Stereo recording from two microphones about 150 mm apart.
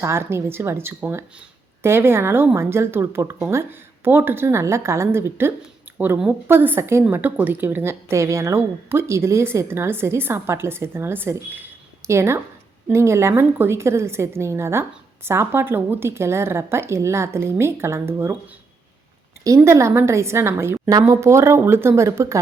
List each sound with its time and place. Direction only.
0.0 s a woman's voice: 15° right (ahead or behind)
19.5 s a woman's voice: 20° right (ahead or behind)